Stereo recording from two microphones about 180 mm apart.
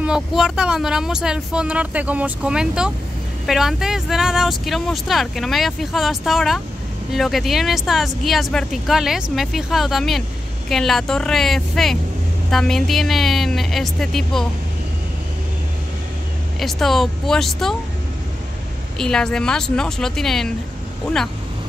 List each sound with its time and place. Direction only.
0.0 s speech: 5° right (ahead or behind)
16.5 s speech: centre (ahead or behind)
18.9 s speech: 5° left (ahead or behind)